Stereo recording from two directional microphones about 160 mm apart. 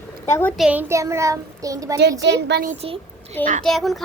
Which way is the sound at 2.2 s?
90° right.